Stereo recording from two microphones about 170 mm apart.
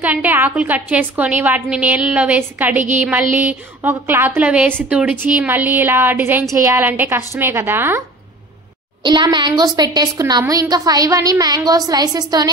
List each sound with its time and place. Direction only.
0.0 s a woman's voice: 10° right (ahead or behind)
9.0 s a woman's voice: 25° right (ahead or behind)